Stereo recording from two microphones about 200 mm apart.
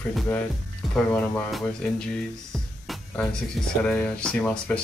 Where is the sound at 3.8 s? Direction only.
5° left (ahead or behind).